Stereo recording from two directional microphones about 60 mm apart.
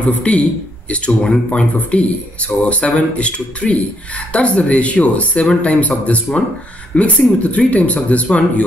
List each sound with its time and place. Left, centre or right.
0.3 s speech: centre